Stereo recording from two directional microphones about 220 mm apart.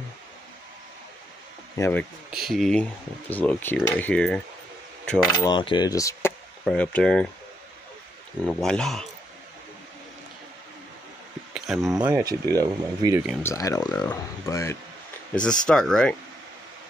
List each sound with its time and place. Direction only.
1.8 s speech: 10° left (ahead or behind)
5.5 s speech: 20° left (ahead or behind)
6.6 s speech: 5° left (ahead or behind)
8.5 s speech: 5° left (ahead or behind)
11.5 s speech: centre (ahead or behind); by 13.2 s 15° right (ahead or behind)
13.4 s speech: 15° left (ahead or behind)
15.6 s speech: 5° left (ahead or behind)